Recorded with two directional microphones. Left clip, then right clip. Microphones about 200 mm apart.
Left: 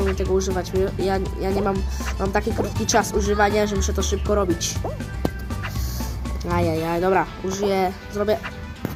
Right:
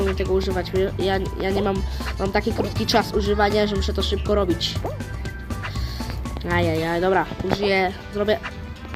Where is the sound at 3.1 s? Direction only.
10° right (ahead or behind).